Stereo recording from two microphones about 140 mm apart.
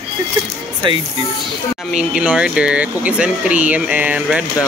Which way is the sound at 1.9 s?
5° right (ahead or behind).